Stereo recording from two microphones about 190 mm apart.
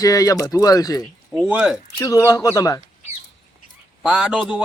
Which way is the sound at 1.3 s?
5° right (ahead or behind).